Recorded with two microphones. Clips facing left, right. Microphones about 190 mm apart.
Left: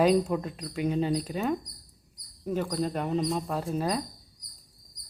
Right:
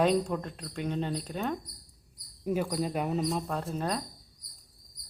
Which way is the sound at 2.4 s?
10° right (ahead or behind).